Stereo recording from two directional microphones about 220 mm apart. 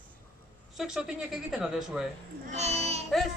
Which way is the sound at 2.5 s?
30° right (ahead or behind).